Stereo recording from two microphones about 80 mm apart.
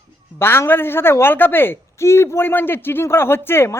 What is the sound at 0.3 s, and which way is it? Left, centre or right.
A man's voice, left.